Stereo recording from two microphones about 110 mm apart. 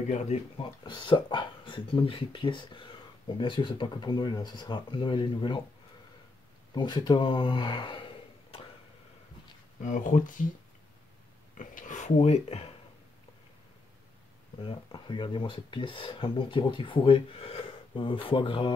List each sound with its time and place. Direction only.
0.1 s speech: 90° left
0.6 s speech: 45° left (ahead or behind)
6.7 s speech: 45° left (ahead or behind)
12.0 s speech: 85° left; by 12.7 s 65° left (ahead or behind)
14.6 s speech: 50° left (ahead or behind)